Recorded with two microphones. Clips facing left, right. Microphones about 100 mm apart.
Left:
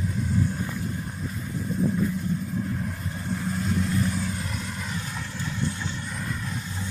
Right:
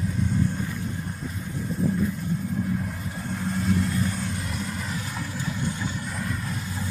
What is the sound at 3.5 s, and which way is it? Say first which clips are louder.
Vehicle: right 3 dB; centre (ahead or behind).